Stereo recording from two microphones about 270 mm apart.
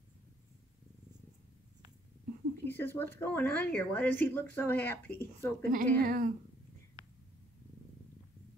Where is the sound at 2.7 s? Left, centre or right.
Centre.